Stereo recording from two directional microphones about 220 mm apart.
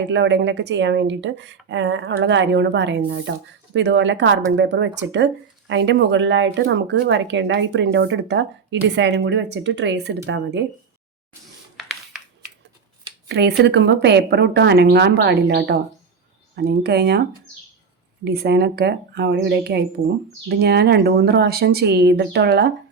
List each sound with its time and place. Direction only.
0.1 s speech: 55° right (ahead or behind)
11.8 s a sound: centre (ahead or behind)
13.2 s speech: 50° right (ahead or behind)
18.3 s speech: 50° right (ahead or behind)